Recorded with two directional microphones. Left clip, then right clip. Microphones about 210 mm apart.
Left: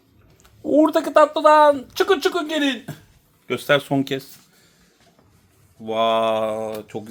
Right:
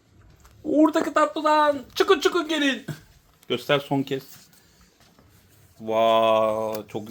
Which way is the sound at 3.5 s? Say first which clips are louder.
Left 4 dB; 35° left (ahead or behind).